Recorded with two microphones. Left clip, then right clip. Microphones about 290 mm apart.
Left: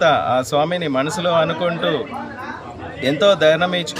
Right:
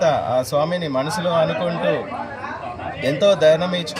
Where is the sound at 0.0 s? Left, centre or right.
Centre.